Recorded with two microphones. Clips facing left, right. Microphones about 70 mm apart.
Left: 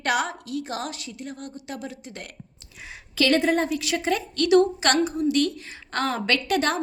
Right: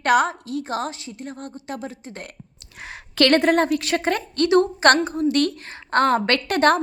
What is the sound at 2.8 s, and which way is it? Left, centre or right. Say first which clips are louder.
A woman's voice: right 5 dB; right.